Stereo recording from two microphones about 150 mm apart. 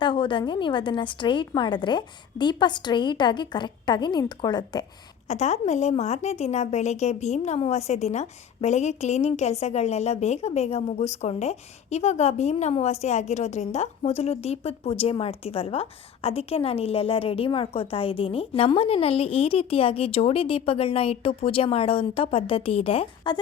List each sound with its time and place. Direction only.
0.0 s a woman's voice: 30° left (ahead or behind)
5.3 s a woman's voice: 50° left (ahead or behind)